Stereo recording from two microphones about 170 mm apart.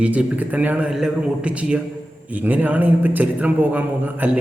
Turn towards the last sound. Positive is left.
turn(degrees=-10)  # may be behind; listen again after turning